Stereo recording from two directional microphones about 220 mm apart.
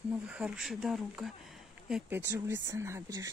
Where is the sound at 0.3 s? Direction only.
Centre (ahead or behind).